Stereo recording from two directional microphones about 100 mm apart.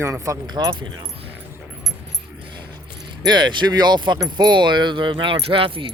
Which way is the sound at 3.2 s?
50° right (ahead or behind).